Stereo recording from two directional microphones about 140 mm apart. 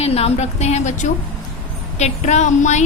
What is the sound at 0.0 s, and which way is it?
A woman's voice, 45° left (ahead or behind).